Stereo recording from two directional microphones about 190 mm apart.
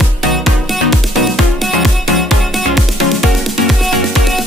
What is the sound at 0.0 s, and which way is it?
Music, centre (ahead or behind).